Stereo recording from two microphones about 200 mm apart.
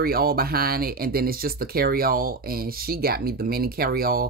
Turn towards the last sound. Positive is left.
turn(degrees=-50)  # may be behind; listen again after turning